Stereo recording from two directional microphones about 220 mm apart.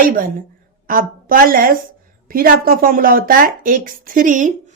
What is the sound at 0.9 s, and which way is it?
Speech, 40° right (ahead or behind).